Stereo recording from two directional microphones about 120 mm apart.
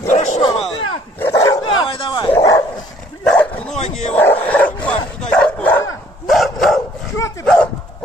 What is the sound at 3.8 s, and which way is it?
Speech, 70° left (ahead or behind).